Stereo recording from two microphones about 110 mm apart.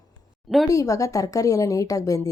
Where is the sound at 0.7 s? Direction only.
30° left (ahead or behind).